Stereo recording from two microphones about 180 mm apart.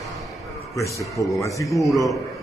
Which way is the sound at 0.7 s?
15° left (ahead or behind).